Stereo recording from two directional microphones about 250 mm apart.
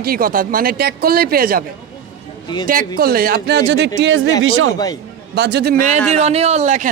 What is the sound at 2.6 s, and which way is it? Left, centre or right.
A man's voice, right.